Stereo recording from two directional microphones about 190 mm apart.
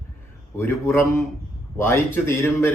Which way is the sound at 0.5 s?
15° left (ahead or behind).